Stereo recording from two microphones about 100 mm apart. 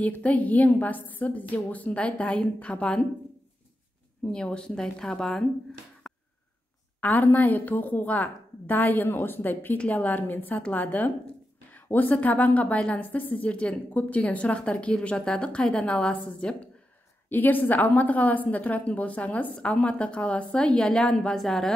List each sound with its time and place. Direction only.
0.0 s a woman's voice: 15° left (ahead or behind)
4.3 s a woman's voice: 10° left (ahead or behind)
6.0 s a sound: 5° left (ahead or behind)
7.0 s a woman's voice: 15° left (ahead or behind)